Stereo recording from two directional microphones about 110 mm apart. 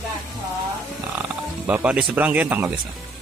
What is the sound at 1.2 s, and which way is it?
Speech, 15° right (ahead or behind).